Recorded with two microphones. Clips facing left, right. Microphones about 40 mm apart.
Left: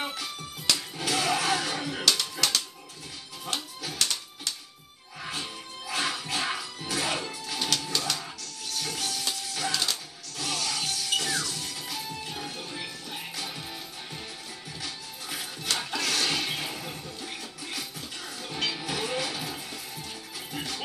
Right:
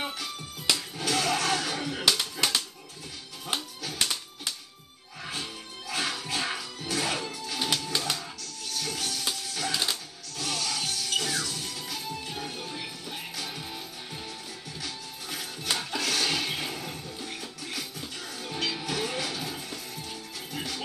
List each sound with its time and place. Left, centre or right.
0.0 s music: centre
2.4 s typewriter: centre
4.0 s music: centre
5.2 s music: centre
7.9 s music: centre
8.7 s music: centre
9.7 s music: centre
10.3 s music: centre